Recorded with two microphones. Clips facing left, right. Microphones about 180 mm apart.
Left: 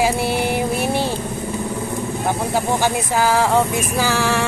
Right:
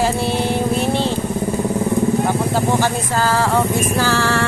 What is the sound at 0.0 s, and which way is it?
Music, 10° left (ahead or behind).